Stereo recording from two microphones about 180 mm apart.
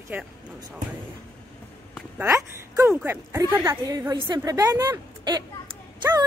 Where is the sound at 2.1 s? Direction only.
15° right (ahead or behind).